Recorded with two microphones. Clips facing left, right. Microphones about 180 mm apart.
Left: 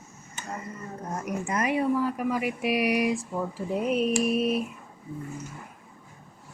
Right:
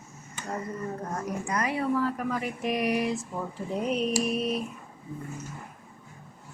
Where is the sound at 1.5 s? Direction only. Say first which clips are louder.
Left 3 dB; 20° left (ahead or behind); by 4.6 s 5° left (ahead or behind).